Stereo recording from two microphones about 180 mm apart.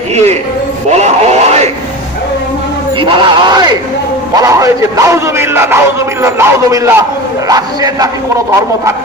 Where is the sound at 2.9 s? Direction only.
25° right (ahead or behind).